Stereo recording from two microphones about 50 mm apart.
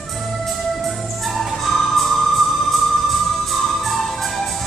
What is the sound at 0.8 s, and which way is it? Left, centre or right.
Music, centre.